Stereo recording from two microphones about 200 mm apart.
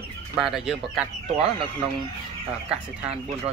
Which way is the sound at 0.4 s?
Centre (ahead or behind).